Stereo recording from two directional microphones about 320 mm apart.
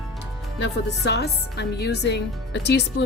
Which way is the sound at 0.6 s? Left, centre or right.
Left.